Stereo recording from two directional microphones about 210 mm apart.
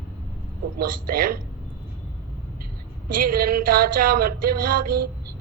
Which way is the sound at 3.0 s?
40° right (ahead or behind).